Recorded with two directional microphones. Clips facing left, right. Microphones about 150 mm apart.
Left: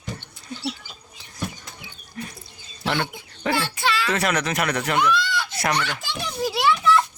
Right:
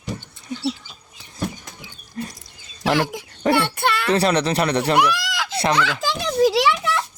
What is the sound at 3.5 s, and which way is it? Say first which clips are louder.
Speech: right 4 dB; 60° right (ahead or behind).